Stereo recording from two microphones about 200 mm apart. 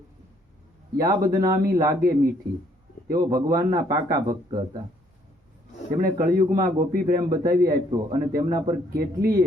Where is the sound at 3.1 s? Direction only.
20° right (ahead or behind).